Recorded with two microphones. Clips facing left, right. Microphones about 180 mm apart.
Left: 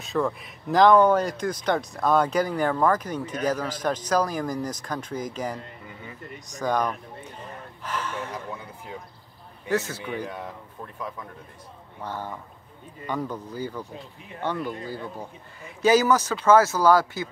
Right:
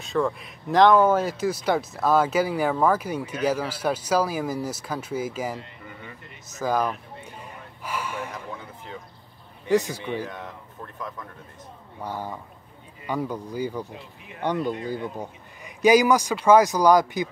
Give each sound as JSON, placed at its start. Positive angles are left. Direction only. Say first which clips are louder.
{"t": 0.0, "sound": "speech", "louder": "right 1 dB", "side_deg": 0}
{"t": 6.4, "sound": "gasp", "louder": "right 1 dB", "side_deg": -5}
{"t": 9.7, "sound": "speech", "louder": "right 4 dB", "side_deg": -15}
{"t": 11.0, "sound": "speech", "louder": "left 1 dB", "side_deg": 10}
{"t": 12.0, "sound": "speech", "louder": "right 1 dB", "side_deg": -10}